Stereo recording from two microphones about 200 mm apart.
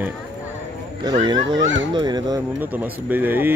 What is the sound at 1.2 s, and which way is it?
Speech, 20° right (ahead or behind).